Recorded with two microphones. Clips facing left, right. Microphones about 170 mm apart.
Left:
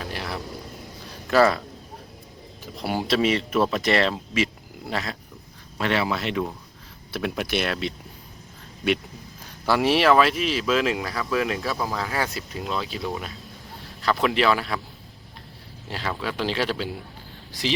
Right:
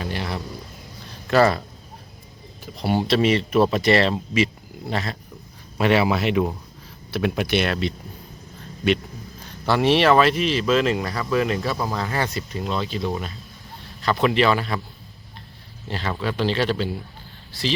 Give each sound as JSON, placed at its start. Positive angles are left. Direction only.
{"t": 0.0, "sound": "a sound", "side_deg": 0}
{"t": 2.7, "sound": "speech", "side_deg": 0}
{"t": 5.7, "sound": "speech", "side_deg": -10}
{"t": 7.1, "sound": "speech", "side_deg": 0}
{"t": 9.6, "sound": "speech", "side_deg": 5}
{"t": 15.9, "sound": "speech", "side_deg": 5}